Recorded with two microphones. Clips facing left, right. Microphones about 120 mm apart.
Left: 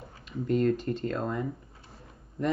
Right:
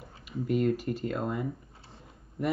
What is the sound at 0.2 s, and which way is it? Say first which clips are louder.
Speech: left 1 dB; 10° right (ahead or behind).